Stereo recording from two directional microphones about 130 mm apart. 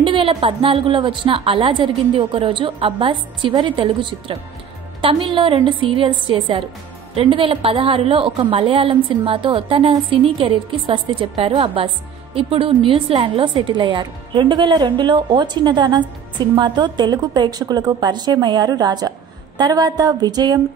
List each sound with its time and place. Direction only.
0.0 s a woman's voice: 40° right (ahead or behind)